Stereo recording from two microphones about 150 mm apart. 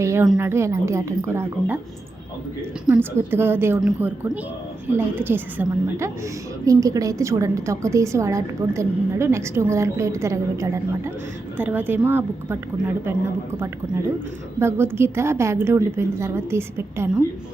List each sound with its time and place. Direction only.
0.0 s a woman's voice: 20° right (ahead or behind)
2.8 s a woman's voice: 10° right (ahead or behind)
14.6 s a woman's voice: 15° right (ahead or behind)